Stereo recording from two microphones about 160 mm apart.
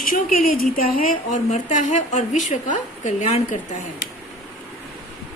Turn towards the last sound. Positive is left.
turn(degrees=50)  # may be behind; listen again after turning